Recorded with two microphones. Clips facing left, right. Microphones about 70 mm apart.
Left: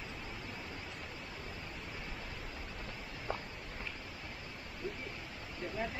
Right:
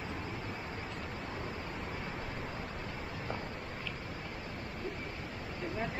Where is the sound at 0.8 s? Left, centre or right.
Right.